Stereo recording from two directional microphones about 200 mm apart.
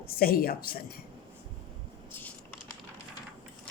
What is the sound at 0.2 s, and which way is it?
Speech, 50° left (ahead or behind).